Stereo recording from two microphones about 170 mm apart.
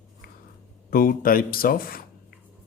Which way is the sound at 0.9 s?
60° left (ahead or behind).